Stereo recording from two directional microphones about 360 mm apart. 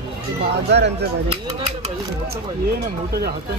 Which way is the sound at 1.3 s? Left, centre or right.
Centre.